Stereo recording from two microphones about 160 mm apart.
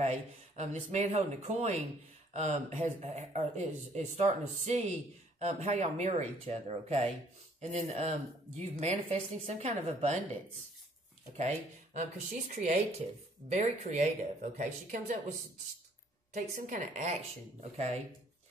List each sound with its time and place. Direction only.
0.0 s speech: 45° right (ahead or behind)
11.3 s speech: 45° right (ahead or behind)
16.3 s a woman's voice: 65° right (ahead or behind)
17.6 s speech: 40° right (ahead or behind)